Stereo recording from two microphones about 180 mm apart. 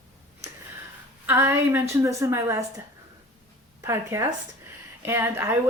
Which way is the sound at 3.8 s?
15° right (ahead or behind).